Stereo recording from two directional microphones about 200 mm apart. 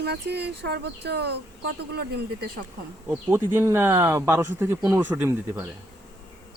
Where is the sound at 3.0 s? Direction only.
10° right (ahead or behind).